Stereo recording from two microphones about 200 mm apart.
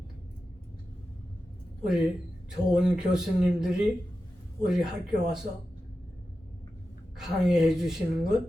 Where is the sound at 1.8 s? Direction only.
5° right (ahead or behind).